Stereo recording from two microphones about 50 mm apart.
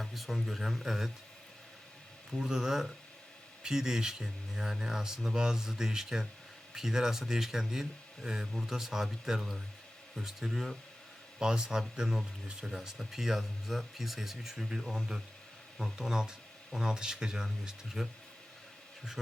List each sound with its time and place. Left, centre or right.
0.0 s speech: centre
2.3 s speech: centre
11.3 s speech: centre